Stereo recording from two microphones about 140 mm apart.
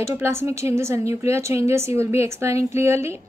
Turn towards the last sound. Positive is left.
turn(degrees=-20)  # may be behind; listen again after turning